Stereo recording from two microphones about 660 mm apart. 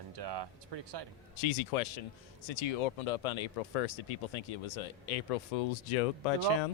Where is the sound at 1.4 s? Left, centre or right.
Left.